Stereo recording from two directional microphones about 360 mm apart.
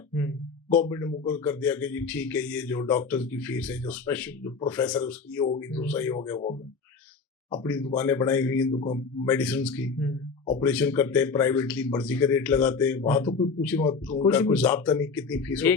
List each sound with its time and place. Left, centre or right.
0.7 s speech: centre
7.5 s speech: centre